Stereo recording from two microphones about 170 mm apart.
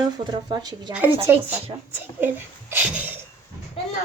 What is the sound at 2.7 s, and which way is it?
Speech, 10° right (ahead or behind).